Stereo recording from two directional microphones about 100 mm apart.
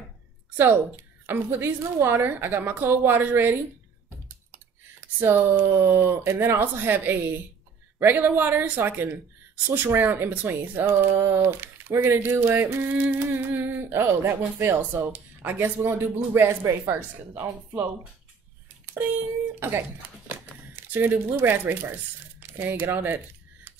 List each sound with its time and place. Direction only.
0.6 s speech: 20° right (ahead or behind)
5.2 s speech: 25° right (ahead or behind)
20.7 s speech: 20° right (ahead or behind)
22.9 s a sound: 20° right (ahead or behind)